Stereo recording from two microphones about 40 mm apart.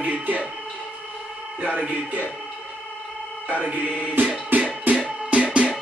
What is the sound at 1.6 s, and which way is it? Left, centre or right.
Speech, right.